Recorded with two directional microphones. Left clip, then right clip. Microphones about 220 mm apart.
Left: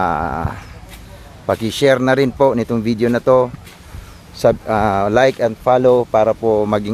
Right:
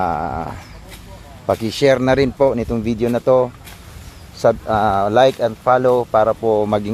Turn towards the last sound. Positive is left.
turn(degrees=10)  # may be behind; listen again after turning